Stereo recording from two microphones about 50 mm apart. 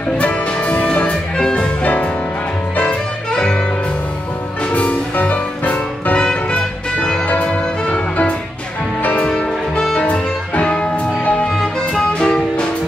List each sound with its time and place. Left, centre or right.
0.2 s music: left
1.8 s music: left
2.8 s music: centre
4.6 s music: left
7.2 s music: left